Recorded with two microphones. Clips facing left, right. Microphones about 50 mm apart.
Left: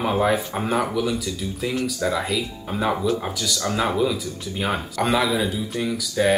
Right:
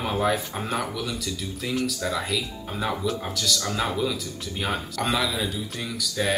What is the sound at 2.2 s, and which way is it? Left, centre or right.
Speech, centre.